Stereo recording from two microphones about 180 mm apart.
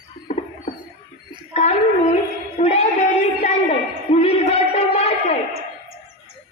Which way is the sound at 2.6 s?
40° left (ahead or behind).